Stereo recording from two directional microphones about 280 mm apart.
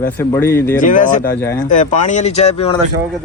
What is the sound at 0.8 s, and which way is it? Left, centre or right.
Speech, left.